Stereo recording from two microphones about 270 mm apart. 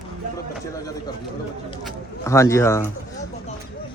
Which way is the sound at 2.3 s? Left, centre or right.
Centre.